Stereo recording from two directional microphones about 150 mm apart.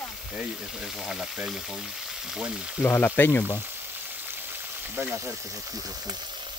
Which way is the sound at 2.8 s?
15° left (ahead or behind).